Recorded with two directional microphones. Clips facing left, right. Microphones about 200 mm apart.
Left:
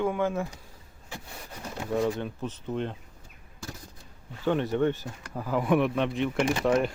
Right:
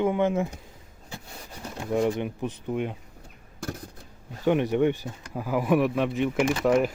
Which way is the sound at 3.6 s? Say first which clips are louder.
Right 7 dB; 55° right (ahead or behind).